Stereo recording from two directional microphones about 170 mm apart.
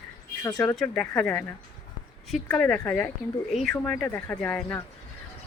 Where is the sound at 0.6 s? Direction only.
5° left (ahead or behind).